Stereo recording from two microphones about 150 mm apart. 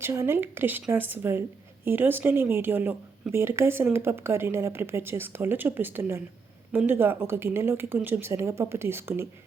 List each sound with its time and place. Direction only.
0.0 s a woman's voice: 15° right (ahead or behind)